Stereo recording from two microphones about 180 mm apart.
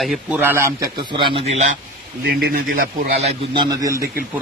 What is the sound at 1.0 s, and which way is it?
Speech, 25° right (ahead or behind).